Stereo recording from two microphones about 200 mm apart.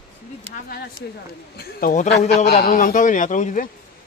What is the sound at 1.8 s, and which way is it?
Speech, 45° left (ahead or behind).